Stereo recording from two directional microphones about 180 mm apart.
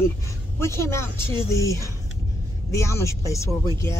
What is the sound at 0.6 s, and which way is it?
Speech, 15° left (ahead or behind).